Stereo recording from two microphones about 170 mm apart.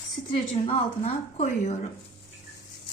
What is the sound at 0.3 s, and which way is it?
A woman's voice, 35° left (ahead or behind).